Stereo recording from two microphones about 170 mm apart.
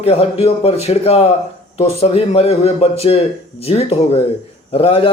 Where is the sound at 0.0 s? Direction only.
35° left (ahead or behind).